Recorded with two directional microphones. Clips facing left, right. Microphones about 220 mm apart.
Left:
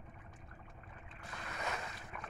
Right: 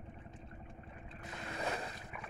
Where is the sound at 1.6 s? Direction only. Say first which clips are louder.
Right 3 dB; 30° right (ahead or behind).